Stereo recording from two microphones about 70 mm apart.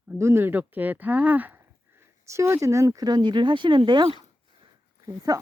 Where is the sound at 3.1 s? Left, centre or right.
Right.